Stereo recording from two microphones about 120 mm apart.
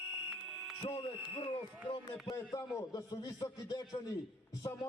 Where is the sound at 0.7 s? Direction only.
45° left (ahead or behind).